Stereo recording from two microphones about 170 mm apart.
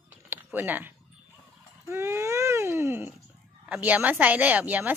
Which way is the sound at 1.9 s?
15° right (ahead or behind).